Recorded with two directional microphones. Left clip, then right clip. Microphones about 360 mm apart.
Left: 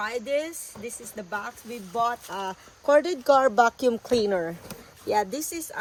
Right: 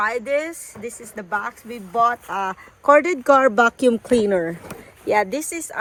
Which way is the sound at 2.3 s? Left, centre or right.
Centre.